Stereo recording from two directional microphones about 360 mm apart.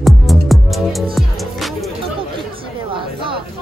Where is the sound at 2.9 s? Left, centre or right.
Centre.